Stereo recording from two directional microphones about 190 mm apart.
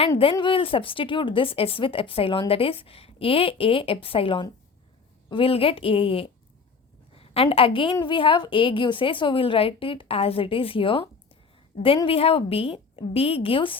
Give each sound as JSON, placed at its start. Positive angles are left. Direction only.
{"t": 0.2, "sound": "a woman's voice", "side_deg": 25}